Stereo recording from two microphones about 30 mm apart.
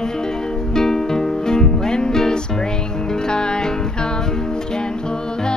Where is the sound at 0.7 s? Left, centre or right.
Centre.